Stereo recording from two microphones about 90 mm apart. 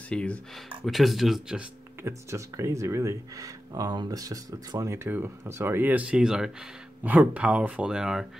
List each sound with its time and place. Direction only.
0.1 s speech: 10° left (ahead or behind)
0.8 s speech: centre (ahead or behind)
2.0 s speech: 35° right (ahead or behind); by 6.5 s 5° right (ahead or behind)
7.0 s speech: 20° right (ahead or behind)